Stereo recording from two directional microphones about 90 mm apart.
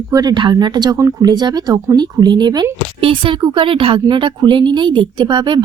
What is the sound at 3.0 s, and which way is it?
Speech, 80° right.